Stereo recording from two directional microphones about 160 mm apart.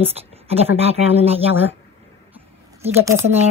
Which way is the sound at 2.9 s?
15° right (ahead or behind).